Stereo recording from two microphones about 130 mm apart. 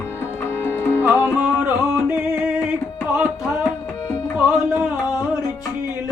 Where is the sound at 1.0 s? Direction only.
15° right (ahead or behind).